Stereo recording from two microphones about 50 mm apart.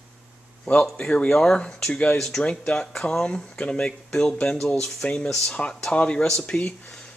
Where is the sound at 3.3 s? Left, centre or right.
Left.